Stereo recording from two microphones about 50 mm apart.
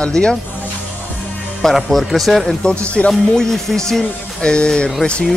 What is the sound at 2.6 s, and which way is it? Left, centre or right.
Speech, left.